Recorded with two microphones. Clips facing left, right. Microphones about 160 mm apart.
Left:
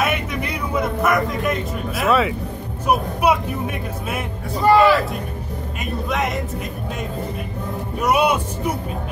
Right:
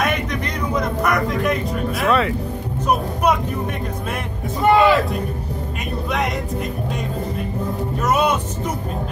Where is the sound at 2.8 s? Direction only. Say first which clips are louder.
Left 1 dB; 10° left (ahead or behind).